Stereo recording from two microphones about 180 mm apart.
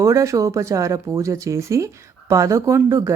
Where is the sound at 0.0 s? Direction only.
20° right (ahead or behind).